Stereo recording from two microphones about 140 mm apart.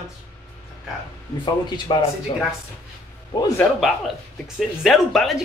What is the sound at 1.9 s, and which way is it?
Speech, 35° left (ahead or behind).